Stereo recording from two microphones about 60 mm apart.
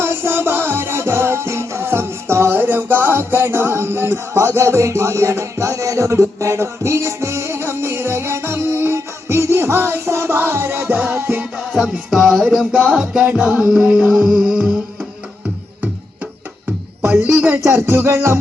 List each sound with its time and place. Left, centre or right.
0.0 s music: right
11.8 s music: centre; by 14.1 s right
14.3 s music: centre
17.0 s speech: right
17.7 s music: right